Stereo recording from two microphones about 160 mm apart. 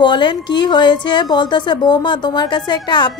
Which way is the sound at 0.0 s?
30° left (ahead or behind).